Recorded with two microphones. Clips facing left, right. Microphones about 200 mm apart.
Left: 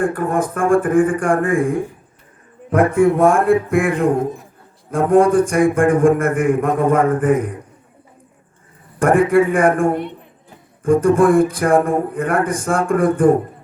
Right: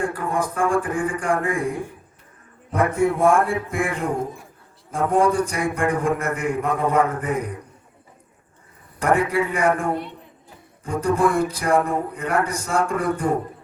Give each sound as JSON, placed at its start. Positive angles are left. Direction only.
{"t": 0.0, "sound": "a man's voice", "side_deg": 55}
{"t": 9.0, "sound": "a man's voice", "side_deg": 50}